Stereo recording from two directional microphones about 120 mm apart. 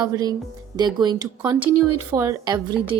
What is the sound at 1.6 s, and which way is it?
Speech, 15° right (ahead or behind).